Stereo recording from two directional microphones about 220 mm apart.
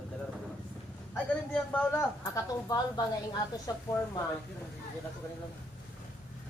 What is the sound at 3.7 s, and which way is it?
Speech, 15° left (ahead or behind).